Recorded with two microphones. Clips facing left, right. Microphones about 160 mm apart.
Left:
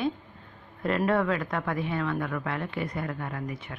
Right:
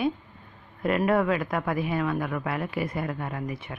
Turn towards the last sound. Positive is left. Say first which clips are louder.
# right 2 dB
turn(degrees=-20)  # may be behind; listen again after turning